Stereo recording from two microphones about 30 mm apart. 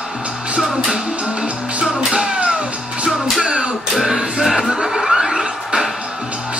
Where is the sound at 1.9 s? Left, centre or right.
Right.